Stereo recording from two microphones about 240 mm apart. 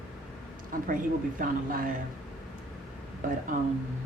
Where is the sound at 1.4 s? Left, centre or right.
Right.